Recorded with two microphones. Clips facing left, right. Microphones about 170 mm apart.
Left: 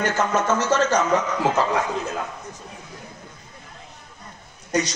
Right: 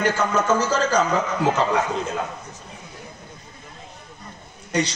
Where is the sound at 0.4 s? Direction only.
30° right (ahead or behind).